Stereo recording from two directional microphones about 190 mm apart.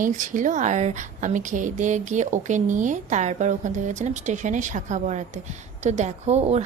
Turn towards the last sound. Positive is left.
turn(degrees=-35)  # may be behind; listen again after turning